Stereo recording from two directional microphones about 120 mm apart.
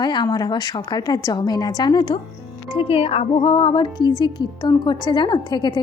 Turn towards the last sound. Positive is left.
turn(degrees=35)  # may be behind; listen again after turning